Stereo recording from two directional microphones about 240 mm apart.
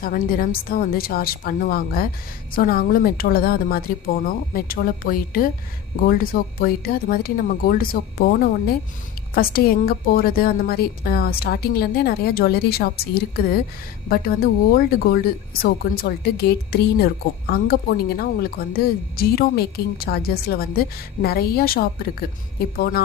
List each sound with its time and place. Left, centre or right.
0.0 s speech: left